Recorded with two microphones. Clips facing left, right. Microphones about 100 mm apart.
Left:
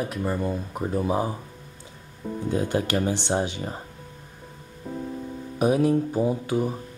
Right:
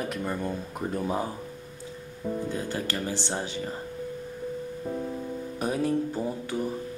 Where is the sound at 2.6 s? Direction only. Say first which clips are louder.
Left 6 dB; 20° left (ahead or behind).